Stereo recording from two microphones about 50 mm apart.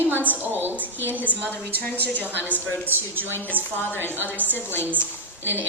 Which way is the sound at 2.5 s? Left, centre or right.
Right.